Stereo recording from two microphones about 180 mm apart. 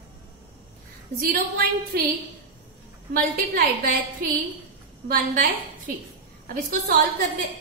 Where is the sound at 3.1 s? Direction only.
55° right (ahead or behind).